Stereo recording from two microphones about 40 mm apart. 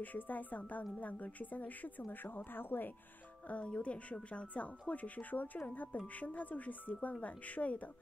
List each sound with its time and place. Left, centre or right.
0.0 s a woman's voice: left
3.4 s speech: left